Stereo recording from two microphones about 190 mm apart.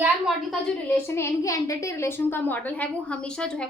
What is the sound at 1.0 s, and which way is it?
A woman's voice, 15° left (ahead or behind).